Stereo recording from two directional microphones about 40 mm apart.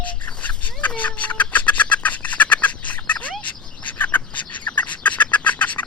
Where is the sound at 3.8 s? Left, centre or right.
Left.